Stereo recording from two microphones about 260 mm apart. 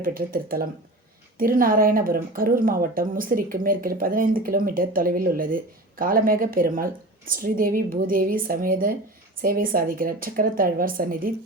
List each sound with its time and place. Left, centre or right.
0.0 s speech: right